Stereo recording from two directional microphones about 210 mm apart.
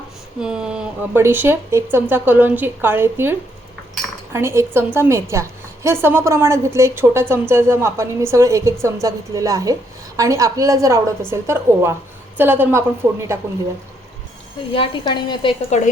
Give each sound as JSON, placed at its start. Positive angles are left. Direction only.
{"t": 0.3, "sound": "a woman's voice", "side_deg": -5}
{"t": 14.7, "sound": "a woman's voice", "side_deg": 25}